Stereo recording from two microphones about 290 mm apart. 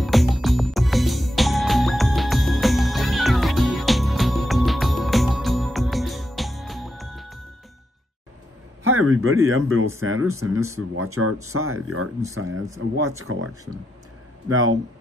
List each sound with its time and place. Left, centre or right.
0.0 s music: centre
8.8 s speech: right
14.5 s speech: right